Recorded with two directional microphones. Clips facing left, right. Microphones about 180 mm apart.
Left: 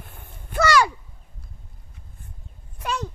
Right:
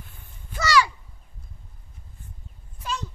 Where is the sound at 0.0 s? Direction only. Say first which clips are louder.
Left 4 dB; 60° left (ahead or behind).